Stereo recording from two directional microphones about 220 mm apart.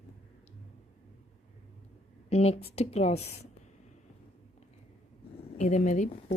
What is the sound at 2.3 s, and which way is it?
A woman's voice, 30° left (ahead or behind).